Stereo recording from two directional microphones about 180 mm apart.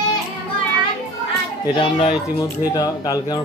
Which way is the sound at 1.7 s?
30° left (ahead or behind).